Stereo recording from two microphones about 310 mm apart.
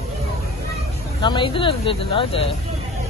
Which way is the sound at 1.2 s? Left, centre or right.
Centre.